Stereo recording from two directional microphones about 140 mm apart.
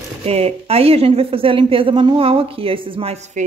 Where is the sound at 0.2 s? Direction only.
50° right (ahead or behind).